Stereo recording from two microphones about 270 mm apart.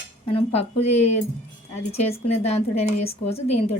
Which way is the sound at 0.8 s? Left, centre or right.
Left.